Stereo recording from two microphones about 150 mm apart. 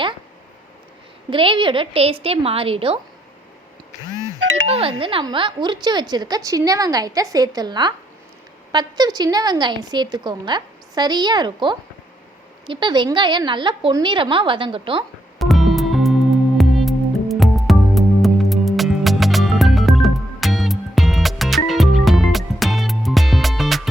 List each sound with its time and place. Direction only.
1.3 s a woman's voice: 35° right (ahead or behind)
4.6 s a woman's voice: 40° right (ahead or behind)
15.4 s music: centre (ahead or behind)